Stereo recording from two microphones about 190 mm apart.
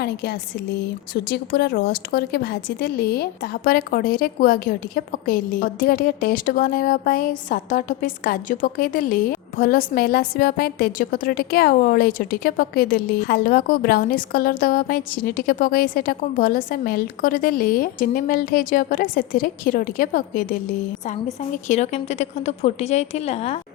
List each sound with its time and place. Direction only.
0.0 s a woman's voice: 60° left (ahead or behind); by 23.6 s 35° left (ahead or behind)